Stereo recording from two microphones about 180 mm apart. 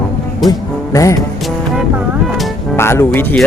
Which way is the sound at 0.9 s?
20° left (ahead or behind).